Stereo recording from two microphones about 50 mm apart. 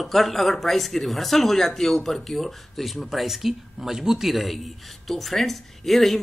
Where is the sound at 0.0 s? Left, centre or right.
Centre.